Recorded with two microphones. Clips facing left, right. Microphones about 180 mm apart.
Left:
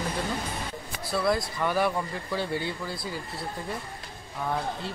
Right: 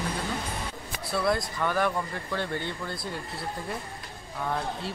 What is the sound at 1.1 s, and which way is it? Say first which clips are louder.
Speech: left 1 dB; centre (ahead or behind).